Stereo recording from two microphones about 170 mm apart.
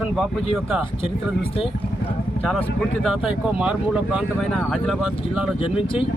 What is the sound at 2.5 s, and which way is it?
Speech, centre (ahead or behind).